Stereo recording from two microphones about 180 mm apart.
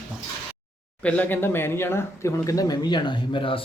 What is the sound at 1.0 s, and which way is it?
Speech, 10° left (ahead or behind).